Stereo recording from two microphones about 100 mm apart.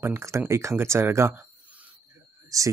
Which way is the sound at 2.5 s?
35° right (ahead or behind).